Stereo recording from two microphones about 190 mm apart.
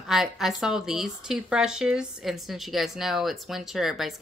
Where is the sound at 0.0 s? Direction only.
Centre (ahead or behind).